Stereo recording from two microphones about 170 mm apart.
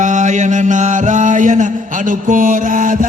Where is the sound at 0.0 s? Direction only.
45° right (ahead or behind).